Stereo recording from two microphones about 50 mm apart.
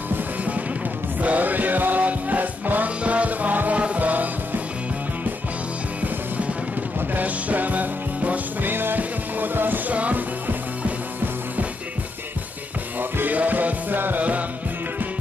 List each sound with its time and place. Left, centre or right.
1.2 s music: right
7.2 s music: right
9.9 s music: right
13.2 s music: right